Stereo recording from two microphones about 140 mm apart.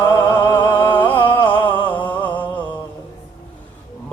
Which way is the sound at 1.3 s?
15° left (ahead or behind).